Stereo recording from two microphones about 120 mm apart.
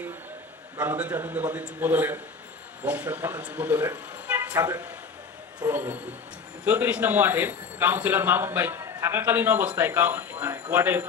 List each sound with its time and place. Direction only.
0.8 s a man's voice: 10° right (ahead or behind)